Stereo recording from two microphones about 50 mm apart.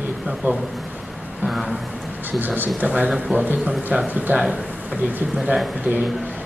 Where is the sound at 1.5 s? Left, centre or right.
Centre.